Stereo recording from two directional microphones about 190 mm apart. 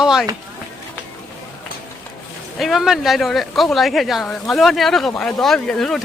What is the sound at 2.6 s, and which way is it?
Speech, centre (ahead or behind).